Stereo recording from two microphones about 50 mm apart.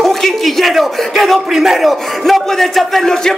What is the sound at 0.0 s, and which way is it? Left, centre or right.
A man's voice, centre.